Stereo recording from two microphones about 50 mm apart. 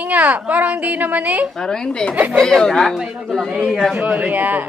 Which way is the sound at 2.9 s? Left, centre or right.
Centre.